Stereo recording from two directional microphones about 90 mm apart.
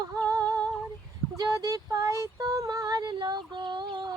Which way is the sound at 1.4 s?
40° right (ahead or behind).